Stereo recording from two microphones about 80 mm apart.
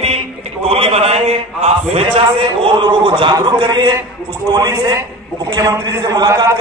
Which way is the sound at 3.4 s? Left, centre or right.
Right.